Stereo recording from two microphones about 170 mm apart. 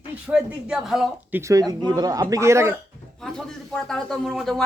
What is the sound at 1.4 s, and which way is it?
A man's voice, 20° right (ahead or behind).